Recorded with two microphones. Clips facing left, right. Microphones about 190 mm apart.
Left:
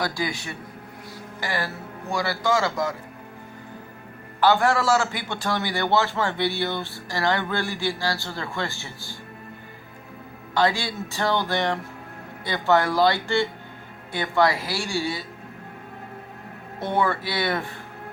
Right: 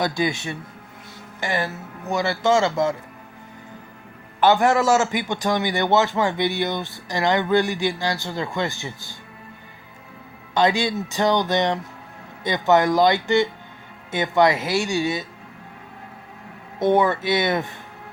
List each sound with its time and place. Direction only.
0.0 s a man's voice: 20° right (ahead or behind)
4.4 s a man's voice: 20° right (ahead or behind)
10.5 s a man's voice: 20° right (ahead or behind)
16.8 s a man's voice: 20° right (ahead or behind)